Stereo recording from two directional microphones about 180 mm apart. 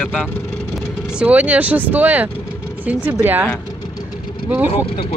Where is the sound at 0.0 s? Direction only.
5° left (ahead or behind).